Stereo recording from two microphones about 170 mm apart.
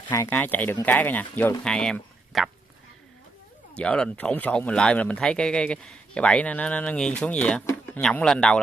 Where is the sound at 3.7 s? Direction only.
5° left (ahead or behind).